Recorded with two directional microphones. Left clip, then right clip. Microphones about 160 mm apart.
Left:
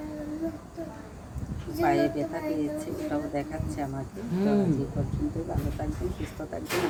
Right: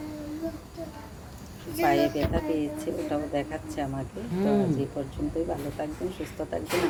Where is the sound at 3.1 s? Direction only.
15° right (ahead or behind).